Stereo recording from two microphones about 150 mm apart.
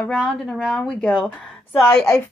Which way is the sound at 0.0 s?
5° left (ahead or behind).